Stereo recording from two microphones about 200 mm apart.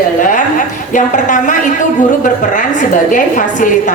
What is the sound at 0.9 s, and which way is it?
A woman's voice, 40° left (ahead or behind).